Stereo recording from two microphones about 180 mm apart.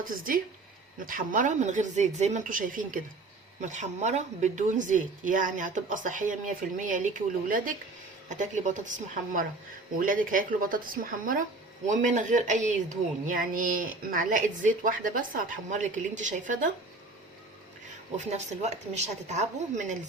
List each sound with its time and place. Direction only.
0.9 s a woman's voice: 50° right (ahead or behind)
18.3 s a woman's voice: 40° right (ahead or behind)